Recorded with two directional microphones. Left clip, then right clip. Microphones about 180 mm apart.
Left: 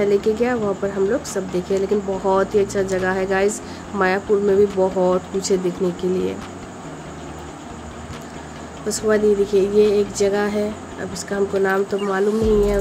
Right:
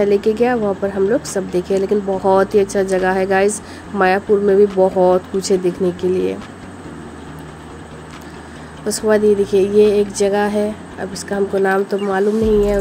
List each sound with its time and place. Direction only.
0.0 s speech: 20° right (ahead or behind)
8.8 s speech: 20° right (ahead or behind)